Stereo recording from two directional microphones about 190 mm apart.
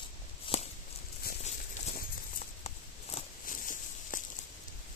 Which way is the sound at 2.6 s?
40° left (ahead or behind).